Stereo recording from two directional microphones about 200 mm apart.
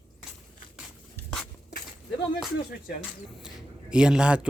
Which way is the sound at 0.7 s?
5° right (ahead or behind).